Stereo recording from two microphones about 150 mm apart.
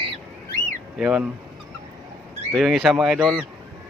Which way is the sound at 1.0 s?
5° right (ahead or behind).